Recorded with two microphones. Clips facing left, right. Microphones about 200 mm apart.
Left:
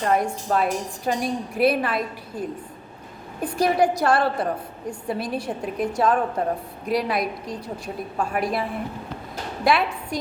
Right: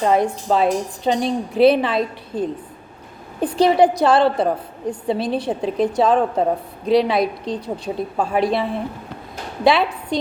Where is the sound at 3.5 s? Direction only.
30° right (ahead or behind).